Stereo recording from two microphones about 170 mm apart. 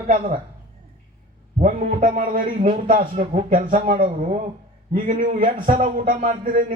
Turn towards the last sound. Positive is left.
turn(degrees=-50)  # may be behind; listen again after turning